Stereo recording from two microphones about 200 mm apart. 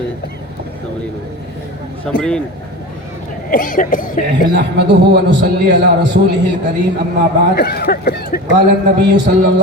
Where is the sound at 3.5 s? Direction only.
40° left (ahead or behind).